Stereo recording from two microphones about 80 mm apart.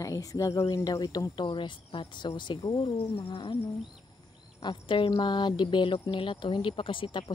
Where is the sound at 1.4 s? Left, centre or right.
Left.